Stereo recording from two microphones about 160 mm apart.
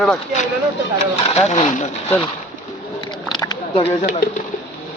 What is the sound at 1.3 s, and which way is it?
Speech, 45° left (ahead or behind).